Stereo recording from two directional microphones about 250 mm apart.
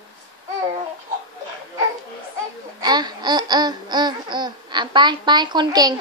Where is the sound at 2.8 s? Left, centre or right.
Centre.